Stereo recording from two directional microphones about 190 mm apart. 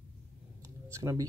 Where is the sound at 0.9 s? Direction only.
15° right (ahead or behind).